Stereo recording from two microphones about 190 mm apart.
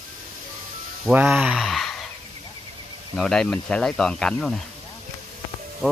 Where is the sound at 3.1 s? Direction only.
5° left (ahead or behind).